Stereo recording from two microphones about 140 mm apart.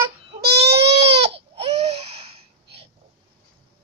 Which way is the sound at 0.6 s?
50° right (ahead or behind).